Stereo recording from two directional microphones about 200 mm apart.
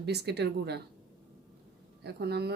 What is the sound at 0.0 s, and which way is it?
Speech, 55° right (ahead or behind).